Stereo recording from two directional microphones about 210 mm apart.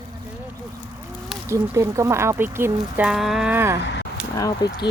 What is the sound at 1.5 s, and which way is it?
Speech, 15° right (ahead or behind).